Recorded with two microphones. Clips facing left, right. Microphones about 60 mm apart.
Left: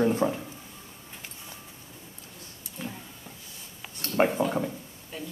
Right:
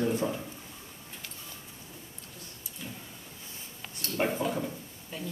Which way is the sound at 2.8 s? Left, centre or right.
Left.